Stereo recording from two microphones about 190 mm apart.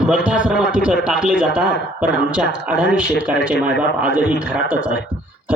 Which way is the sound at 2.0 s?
60° left (ahead or behind).